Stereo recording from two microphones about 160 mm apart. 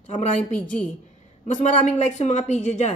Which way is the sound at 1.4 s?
50° left (ahead or behind).